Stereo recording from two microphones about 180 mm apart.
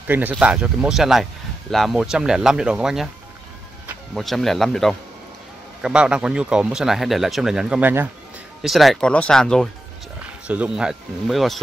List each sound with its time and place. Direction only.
0.0 s speech: 10° right (ahead or behind)
4.1 s speech: centre (ahead or behind)
8.6 s speech: centre (ahead or behind)